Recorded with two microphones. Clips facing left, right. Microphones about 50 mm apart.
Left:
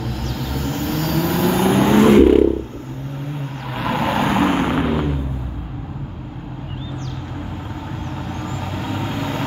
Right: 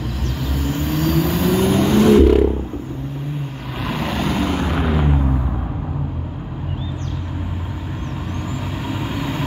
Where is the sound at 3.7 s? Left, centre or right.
Centre.